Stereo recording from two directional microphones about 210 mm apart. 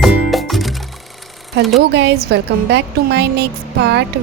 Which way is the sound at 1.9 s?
50° right (ahead or behind).